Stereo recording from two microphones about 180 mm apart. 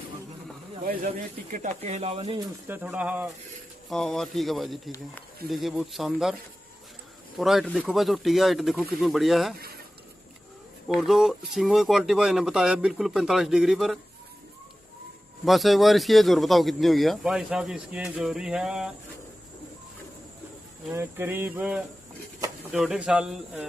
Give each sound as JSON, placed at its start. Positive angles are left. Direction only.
{"t": 1.0, "sound": "speech", "side_deg": -40}
{"t": 2.7, "sound": "a sound", "side_deg": -5}
{"t": 3.9, "sound": "a man's voice", "side_deg": 0}
{"t": 7.3, "sound": "a man's voice", "side_deg": 0}
{"t": 10.9, "sound": "a man's voice", "side_deg": 0}
{"t": 15.4, "sound": "a man's voice", "side_deg": 0}
{"t": 20.9, "sound": "a sound", "side_deg": -15}
{"t": 22.7, "sound": "a man's voice", "side_deg": -5}